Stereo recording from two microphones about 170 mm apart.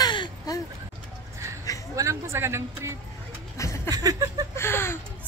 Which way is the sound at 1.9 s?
15° right (ahead or behind).